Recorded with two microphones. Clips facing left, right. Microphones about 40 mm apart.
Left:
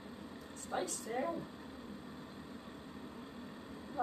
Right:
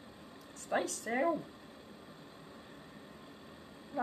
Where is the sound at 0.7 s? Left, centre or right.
Right.